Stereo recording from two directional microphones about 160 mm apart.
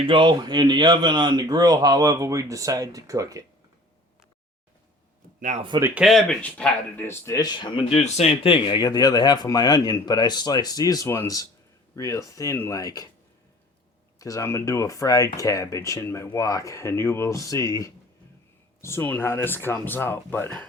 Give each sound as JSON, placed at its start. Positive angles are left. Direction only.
{"t": 0.0, "sound": "speech", "side_deg": -30}
{"t": 5.4, "sound": "speech", "side_deg": -50}
{"t": 5.8, "sound": "speech", "side_deg": -5}
{"t": 7.9, "sound": "speech", "side_deg": 40}
{"t": 14.2, "sound": "speech", "side_deg": 20}